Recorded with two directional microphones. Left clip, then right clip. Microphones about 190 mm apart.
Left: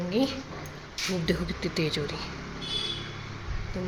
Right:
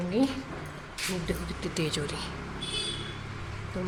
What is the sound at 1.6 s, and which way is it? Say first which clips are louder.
Speech: left 2 dB; 15° left (ahead or behind).